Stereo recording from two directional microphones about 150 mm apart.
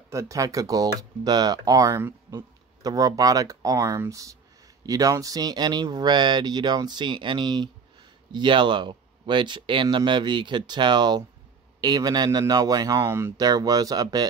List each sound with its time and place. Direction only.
0.1 s speech: 20° right (ahead or behind)